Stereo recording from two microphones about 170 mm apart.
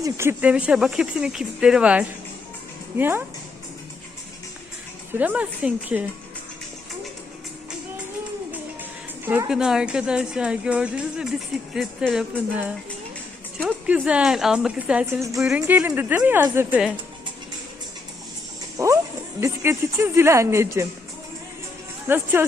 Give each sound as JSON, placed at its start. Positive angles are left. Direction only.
{"t": 0.0, "sound": "a woman's voice", "side_deg": -15}
{"t": 5.1, "sound": "speech", "side_deg": -10}
{"t": 8.8, "sound": "a woman's voice", "side_deg": -10}
{"t": 13.7, "sound": "a woman's voice", "side_deg": -10}
{"t": 15.0, "sound": "speech", "side_deg": -15}
{"t": 15.4, "sound": "speech", "side_deg": -5}
{"t": 18.8, "sound": "speech", "side_deg": -20}
{"t": 22.0, "sound": "speech", "side_deg": -10}